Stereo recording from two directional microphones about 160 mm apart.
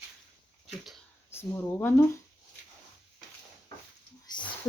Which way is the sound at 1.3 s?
15° left (ahead or behind).